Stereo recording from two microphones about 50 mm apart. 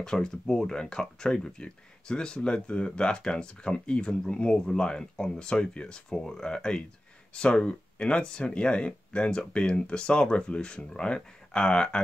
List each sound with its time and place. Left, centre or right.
0.0 s speech: centre